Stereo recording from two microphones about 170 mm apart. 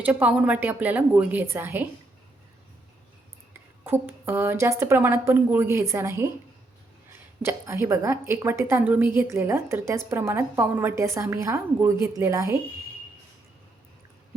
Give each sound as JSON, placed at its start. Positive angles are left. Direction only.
{"t": 0.0, "sound": "a woman's voice", "side_deg": -10}
{"t": 3.8, "sound": "a woman's voice", "side_deg": -15}
{"t": 7.4, "sound": "a woman's voice", "side_deg": -15}